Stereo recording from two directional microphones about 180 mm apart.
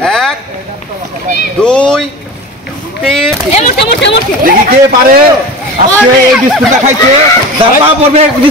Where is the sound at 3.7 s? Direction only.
75° left (ahead or behind).